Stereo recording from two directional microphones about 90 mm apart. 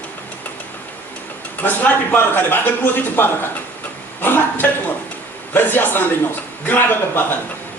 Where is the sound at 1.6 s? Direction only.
20° left (ahead or behind).